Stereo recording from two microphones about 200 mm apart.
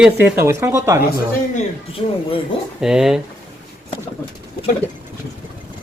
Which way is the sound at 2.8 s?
Centre (ahead or behind).